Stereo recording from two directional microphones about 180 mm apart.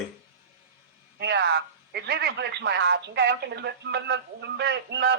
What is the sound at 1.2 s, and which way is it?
Speech, 70° right (ahead or behind).